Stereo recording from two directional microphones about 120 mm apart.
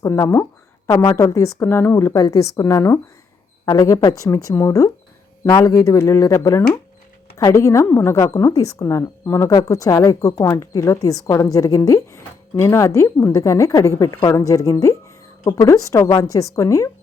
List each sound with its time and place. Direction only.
0.0 s a woman's voice: 25° left (ahead or behind)
2.1 s speech: 30° left (ahead or behind)